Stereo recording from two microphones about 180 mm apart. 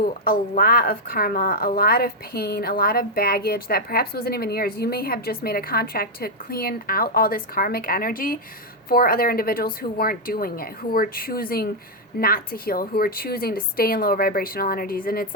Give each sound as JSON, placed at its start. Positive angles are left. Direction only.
{"t": 0.0, "sound": "a woman's voice", "side_deg": 55}